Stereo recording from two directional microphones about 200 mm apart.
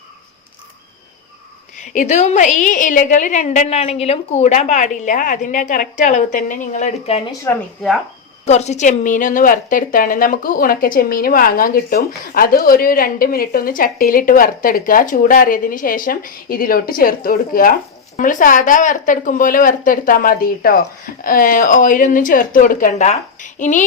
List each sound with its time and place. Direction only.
1.7 s a woman's voice: 40° left (ahead or behind)
7.5 s speech: 10° left (ahead or behind)
8.4 s a woman's voice: 35° left (ahead or behind)